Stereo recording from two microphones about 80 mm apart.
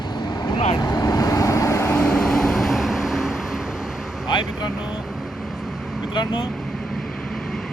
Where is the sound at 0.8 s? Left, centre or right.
Left.